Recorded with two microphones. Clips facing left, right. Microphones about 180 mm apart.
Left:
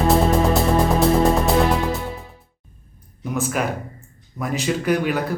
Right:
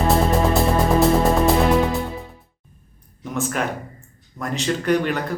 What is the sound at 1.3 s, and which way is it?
Music, centre (ahead or behind).